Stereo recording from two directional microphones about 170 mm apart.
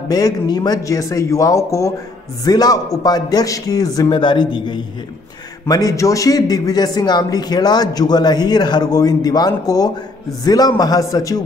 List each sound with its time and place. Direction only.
0.1 s a man's voice: 20° left (ahead or behind)